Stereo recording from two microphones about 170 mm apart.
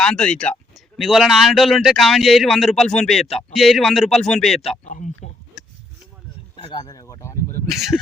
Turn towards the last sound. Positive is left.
turn(degrees=0)  # may be behind; listen again after turning